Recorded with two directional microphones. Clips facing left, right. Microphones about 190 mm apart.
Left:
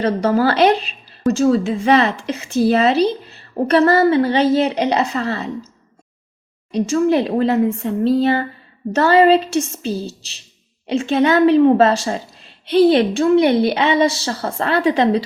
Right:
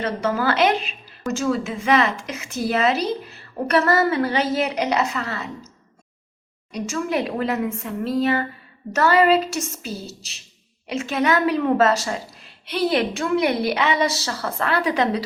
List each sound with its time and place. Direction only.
0.0 s a woman's voice: 35° left (ahead or behind)
6.7 s a woman's voice: 30° left (ahead or behind)